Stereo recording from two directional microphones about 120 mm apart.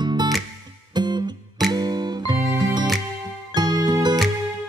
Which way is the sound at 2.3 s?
25° right (ahead or behind).